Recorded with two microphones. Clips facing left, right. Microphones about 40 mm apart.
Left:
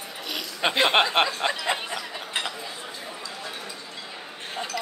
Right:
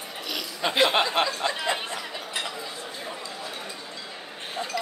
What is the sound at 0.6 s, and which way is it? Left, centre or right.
Speech, left.